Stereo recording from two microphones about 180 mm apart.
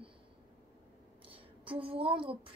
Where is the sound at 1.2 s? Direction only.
30° right (ahead or behind).